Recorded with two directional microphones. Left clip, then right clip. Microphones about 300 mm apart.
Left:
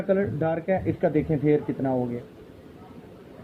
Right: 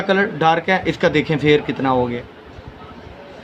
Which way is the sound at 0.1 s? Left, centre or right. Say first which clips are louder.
Right 9 dB; right.